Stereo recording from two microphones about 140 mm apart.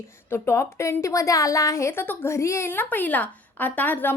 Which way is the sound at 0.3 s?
20° left (ahead or behind).